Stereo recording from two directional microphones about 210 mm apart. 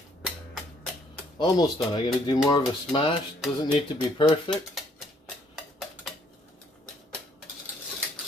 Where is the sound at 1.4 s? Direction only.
20° left (ahead or behind).